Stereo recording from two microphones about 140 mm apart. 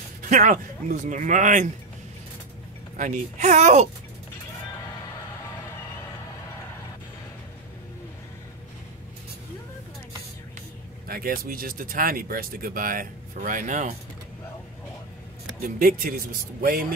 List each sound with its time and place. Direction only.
0.2 s speech: 65° right (ahead or behind)
3.0 s speech: 65° right (ahead or behind)
11.1 s speech: 90° right; by 13.9 s 65° right (ahead or behind)
15.6 s speech: 85° right